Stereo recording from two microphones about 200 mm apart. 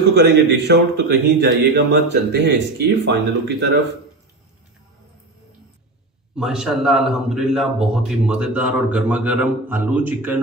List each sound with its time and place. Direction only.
0.1 s a man's voice: 55° right (ahead or behind)
6.3 s a man's voice: 5° right (ahead or behind)